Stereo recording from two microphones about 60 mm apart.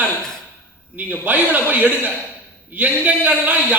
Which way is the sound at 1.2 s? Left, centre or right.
Right.